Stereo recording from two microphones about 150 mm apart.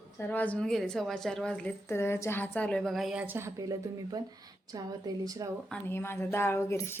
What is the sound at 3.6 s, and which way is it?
A woman's voice, 25° right (ahead or behind).